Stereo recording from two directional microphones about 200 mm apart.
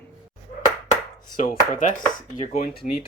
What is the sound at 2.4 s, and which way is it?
Speech, 35° left (ahead or behind).